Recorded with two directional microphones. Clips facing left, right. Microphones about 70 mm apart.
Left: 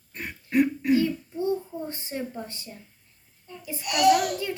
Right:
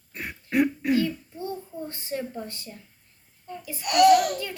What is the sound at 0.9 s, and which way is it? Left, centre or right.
A child's voice, left.